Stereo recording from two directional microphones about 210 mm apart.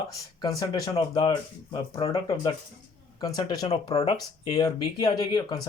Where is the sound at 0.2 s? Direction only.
15° left (ahead or behind).